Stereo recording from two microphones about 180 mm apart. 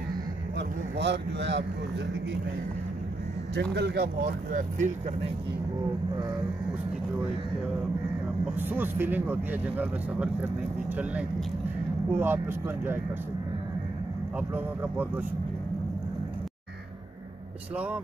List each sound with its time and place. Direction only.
0.6 s speech: 75° right (ahead or behind)
3.7 s speech: 65° right (ahead or behind); by 4.9 s 45° right (ahead or behind)
8.5 s speech: 10° right (ahead or behind)
14.5 s speech: 10° right (ahead or behind)